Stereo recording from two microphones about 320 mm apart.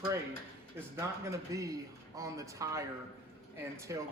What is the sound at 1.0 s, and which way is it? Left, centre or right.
Speech, centre.